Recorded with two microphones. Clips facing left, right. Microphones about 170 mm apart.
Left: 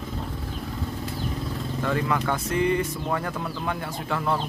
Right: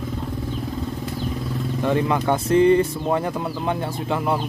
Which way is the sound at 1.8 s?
20° right (ahead or behind).